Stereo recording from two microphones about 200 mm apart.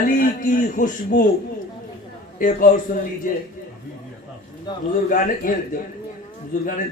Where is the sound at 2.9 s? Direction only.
40° left (ahead or behind).